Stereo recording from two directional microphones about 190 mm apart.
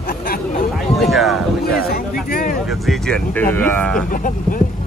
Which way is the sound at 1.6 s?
55° left (ahead or behind).